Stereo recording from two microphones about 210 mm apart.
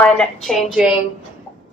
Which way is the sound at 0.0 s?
5° left (ahead or behind).